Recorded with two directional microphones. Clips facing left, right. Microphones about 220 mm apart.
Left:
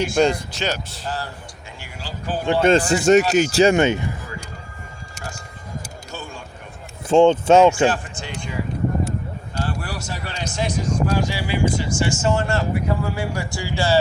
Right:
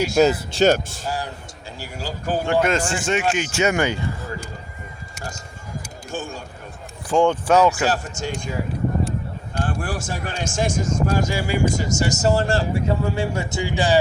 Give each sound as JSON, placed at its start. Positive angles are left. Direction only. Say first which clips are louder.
{"t": 0.2, "sound": "speech", "louder": "right 2 dB", "side_deg": -5}
{"t": 0.6, "sound": "speech", "louder": "right 13 dB", "side_deg": -50}
{"t": 1.0, "sound": "speech", "louder": "left 1 dB", "side_deg": -10}
{"t": 1.8, "sound": "a sound", "louder": "right 4 dB", "side_deg": -45}
{"t": 2.6, "sound": "speech", "louder": "left 4 dB", "side_deg": 30}
{"t": 6.1, "sound": "a sound", "louder": "right 7 dB", "side_deg": -45}
{"t": 7.1, "sound": "speech", "louder": "left 4 dB", "side_deg": 25}
{"t": 7.9, "sound": "speech", "louder": "left 1 dB", "side_deg": -40}
{"t": 9.6, "sound": "speech", "louder": "right 2 dB", "side_deg": -50}